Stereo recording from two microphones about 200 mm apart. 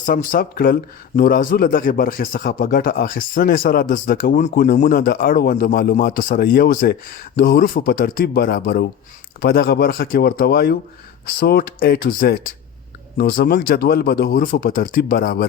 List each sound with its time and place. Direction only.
0.0 s speech: 40° left (ahead or behind)